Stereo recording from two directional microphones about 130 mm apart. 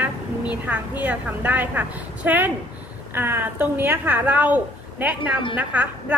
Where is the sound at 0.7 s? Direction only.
15° right (ahead or behind).